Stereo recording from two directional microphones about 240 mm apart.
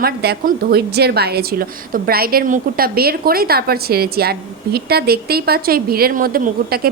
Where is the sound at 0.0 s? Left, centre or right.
Right.